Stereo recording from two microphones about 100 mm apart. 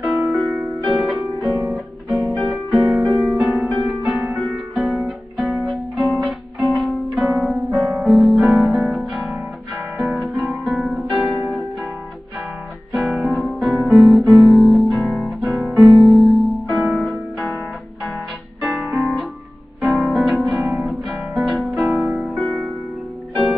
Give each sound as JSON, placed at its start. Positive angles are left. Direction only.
{"t": 0.0, "sound": "music", "side_deg": 0}
{"t": 1.1, "sound": "music", "side_deg": -20}
{"t": 2.7, "sound": "music", "side_deg": -50}
{"t": 3.0, "sound": "music", "side_deg": 0}
{"t": 12.9, "sound": "guitar", "side_deg": 0}
{"t": 18.8, "sound": "music", "side_deg": 0}